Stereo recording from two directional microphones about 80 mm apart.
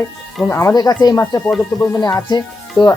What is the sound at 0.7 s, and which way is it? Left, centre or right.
Speech, left.